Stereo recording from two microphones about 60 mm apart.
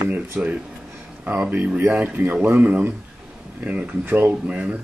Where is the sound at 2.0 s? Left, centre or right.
Right.